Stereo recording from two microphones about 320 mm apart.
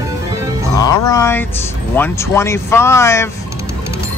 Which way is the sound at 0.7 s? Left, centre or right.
Centre.